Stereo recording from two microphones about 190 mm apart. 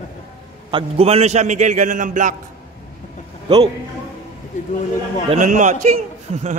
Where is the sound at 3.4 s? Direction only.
25° right (ahead or behind).